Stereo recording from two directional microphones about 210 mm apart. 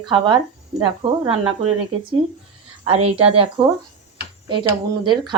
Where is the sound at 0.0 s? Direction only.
20° right (ahead or behind).